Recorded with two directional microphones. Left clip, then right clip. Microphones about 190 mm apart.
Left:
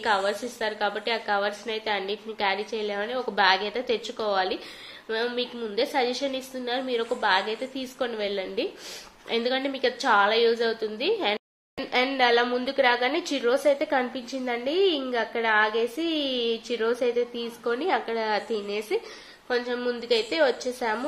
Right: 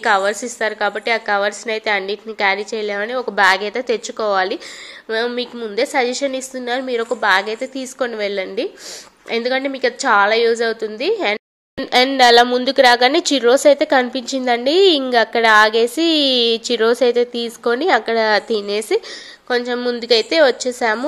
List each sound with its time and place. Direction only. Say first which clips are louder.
0.0 s a woman's voice: right 9 dB; 40° right (ahead or behind)